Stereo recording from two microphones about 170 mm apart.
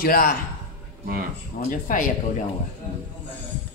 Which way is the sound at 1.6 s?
50° left (ahead or behind).